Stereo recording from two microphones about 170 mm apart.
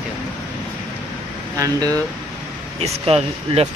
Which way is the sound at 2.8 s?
35° right (ahead or behind).